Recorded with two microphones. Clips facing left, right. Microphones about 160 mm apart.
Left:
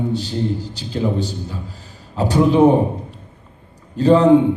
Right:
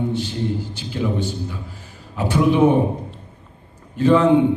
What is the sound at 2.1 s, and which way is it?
Speech, 40° left (ahead or behind).